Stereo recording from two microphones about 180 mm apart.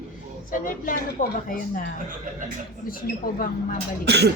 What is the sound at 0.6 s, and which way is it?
Speech, 50° left (ahead or behind).